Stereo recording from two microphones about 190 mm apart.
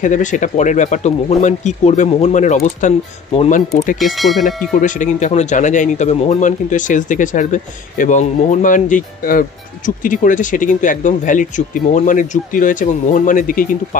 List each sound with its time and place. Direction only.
0.0 s speech: 40° left (ahead or behind)
4.0 s speech: centre (ahead or behind)
4.7 s speech: 40° left (ahead or behind)